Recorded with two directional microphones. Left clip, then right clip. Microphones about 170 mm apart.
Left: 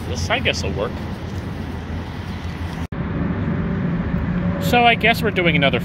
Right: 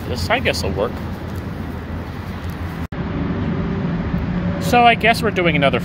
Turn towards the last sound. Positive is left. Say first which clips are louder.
# right 1 dB
turn(degrees=-5)  # may be behind; listen again after turning